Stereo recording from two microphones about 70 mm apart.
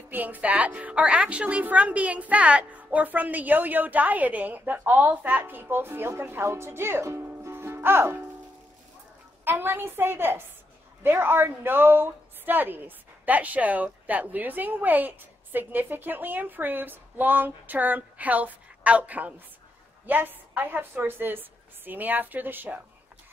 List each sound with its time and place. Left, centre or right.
0.1 s a woman's voice: right
9.4 s a woman's voice: right